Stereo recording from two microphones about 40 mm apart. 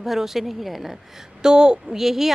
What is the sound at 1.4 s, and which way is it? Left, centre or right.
Speech, centre.